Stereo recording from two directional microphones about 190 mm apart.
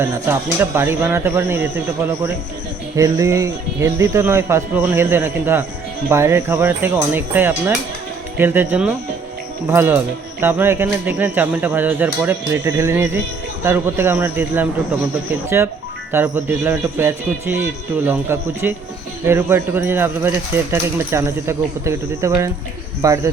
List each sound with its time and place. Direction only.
0.0 s speech: 10° right (ahead or behind)